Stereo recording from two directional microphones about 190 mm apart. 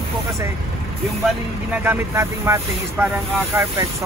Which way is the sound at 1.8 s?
15° right (ahead or behind).